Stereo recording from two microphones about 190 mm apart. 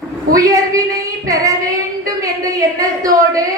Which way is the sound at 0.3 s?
15° right (ahead or behind).